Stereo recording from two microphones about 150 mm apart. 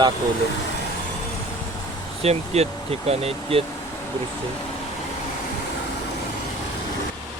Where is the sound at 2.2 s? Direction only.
45° right (ahead or behind).